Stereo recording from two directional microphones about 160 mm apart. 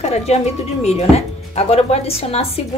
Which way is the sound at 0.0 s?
40° left (ahead or behind).